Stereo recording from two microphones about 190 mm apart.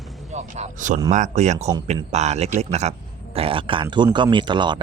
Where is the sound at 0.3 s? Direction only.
35° right (ahead or behind).